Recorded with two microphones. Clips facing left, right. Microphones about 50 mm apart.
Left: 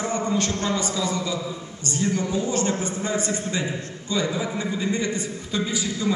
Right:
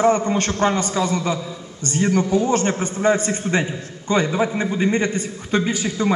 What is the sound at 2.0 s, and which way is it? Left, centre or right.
Speech, right.